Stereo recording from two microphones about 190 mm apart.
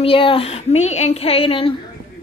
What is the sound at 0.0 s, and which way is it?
Speech, 30° left (ahead or behind).